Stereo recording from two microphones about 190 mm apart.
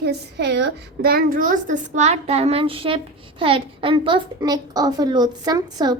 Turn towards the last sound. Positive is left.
turn(degrees=-20)  # may be behind; listen again after turning